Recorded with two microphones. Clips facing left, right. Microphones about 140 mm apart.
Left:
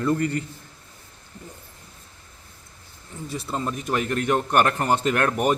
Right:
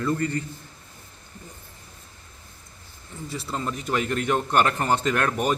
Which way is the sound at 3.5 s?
15° left (ahead or behind).